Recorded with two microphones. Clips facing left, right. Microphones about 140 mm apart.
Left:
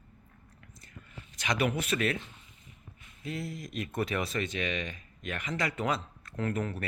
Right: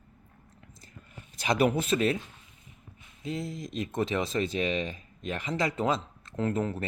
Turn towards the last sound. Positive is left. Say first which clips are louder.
# right 3 dB
turn(degrees=-25)  # may be behind; listen again after turning